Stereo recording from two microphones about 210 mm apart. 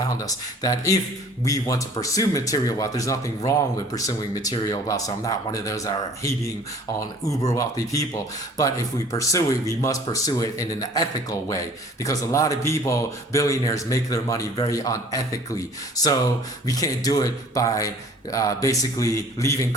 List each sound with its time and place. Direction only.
0.6 s speech: 15° left (ahead or behind)
9.1 s speech: 15° left (ahead or behind)
16.6 s speech: 15° left (ahead or behind)